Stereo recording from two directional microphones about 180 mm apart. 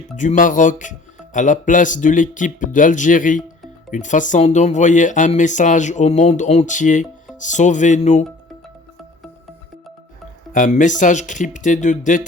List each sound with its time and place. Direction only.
0.2 s speech: 45° left (ahead or behind)
10.5 s speech: 45° left (ahead or behind)